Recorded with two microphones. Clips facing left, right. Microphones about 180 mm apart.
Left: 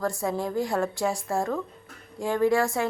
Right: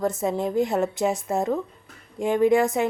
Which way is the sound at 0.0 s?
20° right (ahead or behind).